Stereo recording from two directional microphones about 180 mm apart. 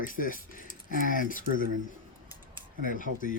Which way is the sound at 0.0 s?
50° left (ahead or behind).